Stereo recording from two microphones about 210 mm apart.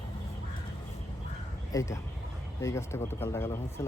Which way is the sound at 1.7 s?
15° left (ahead or behind).